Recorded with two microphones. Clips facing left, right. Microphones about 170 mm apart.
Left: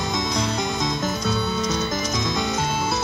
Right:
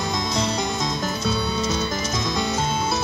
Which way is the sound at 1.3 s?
5° right (ahead or behind).